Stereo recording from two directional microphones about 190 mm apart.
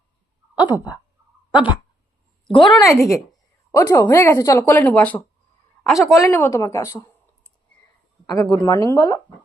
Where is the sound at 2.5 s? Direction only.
20° left (ahead or behind).